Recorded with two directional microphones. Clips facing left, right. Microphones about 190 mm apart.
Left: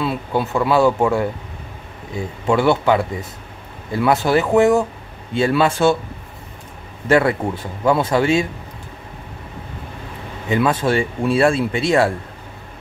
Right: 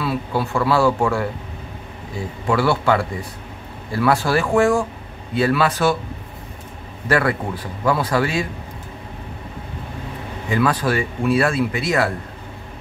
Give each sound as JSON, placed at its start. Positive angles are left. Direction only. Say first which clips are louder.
{"t": 0.0, "sound": "speech", "louder": "left 2 dB", "side_deg": 20}
{"t": 2.4, "sound": "speech", "louder": "left 3 dB", "side_deg": 20}
{"t": 7.1, "sound": "speech", "louder": "left 4 dB", "side_deg": 25}
{"t": 10.5, "sound": "speech", "louder": "left 2 dB", "side_deg": 25}